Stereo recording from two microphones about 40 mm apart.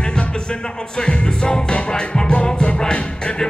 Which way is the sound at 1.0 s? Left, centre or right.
Left.